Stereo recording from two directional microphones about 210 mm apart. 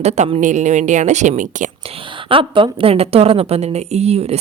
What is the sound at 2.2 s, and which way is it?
A woman's voice, 25° right (ahead or behind).